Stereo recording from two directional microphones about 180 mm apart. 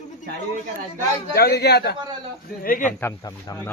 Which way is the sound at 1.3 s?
65° left (ahead or behind).